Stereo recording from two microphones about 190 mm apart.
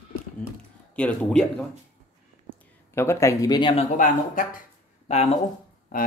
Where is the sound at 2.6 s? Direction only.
15° left (ahead or behind).